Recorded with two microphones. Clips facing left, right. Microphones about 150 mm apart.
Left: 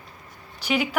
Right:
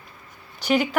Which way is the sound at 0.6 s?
5° left (ahead or behind).